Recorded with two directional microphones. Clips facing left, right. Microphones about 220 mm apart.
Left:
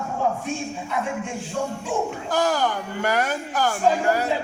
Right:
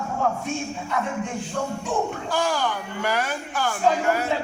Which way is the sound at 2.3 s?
40° left (ahead or behind).